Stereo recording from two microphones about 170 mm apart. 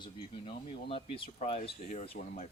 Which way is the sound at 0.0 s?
30° left (ahead or behind).